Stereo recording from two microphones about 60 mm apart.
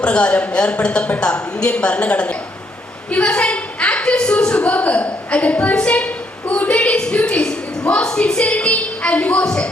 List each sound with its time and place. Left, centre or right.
0.0 s a woman's voice: centre
3.1 s a sound: left
9.4 s a woman's voice: centre